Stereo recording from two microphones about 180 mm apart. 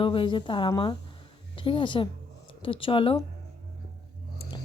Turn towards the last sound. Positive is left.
turn(degrees=30)  # may be behind; listen again after turning